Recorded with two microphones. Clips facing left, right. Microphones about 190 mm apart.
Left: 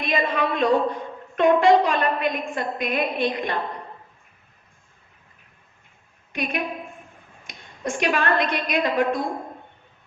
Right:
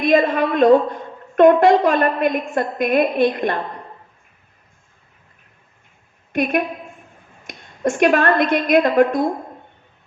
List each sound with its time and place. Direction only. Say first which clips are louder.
0.0 s a woman's voice: right 8 dB; 50° right (ahead or behind)
6.3 s a woman's voice: right 8 dB; 50° right (ahead or behind)